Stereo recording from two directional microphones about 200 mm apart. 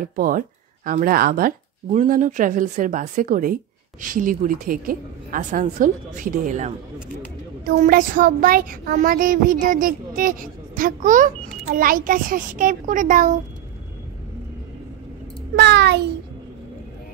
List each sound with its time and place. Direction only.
0.0 s a woman's voice: 45° right (ahead or behind)
7.7 s speech: 40° right (ahead or behind)
15.5 s a child's voice: 60° right (ahead or behind)